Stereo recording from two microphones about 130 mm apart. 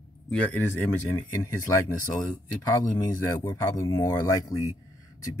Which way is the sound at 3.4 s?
20° left (ahead or behind).